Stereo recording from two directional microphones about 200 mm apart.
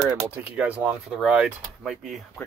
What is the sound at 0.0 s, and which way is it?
Speech, 10° right (ahead or behind).